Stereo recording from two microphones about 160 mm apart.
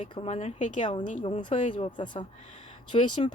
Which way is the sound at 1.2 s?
30° left (ahead or behind).